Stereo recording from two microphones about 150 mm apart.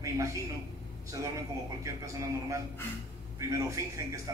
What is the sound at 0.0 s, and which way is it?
Speech, 20° right (ahead or behind).